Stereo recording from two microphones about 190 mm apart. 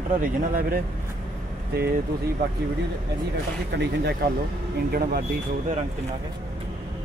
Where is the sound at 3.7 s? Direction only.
65° right (ahead or behind).